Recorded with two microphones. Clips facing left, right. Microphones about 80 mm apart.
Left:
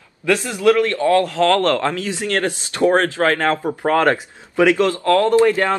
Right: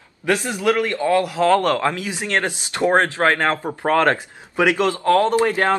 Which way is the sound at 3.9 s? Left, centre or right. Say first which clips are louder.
Left 1 dB; centre.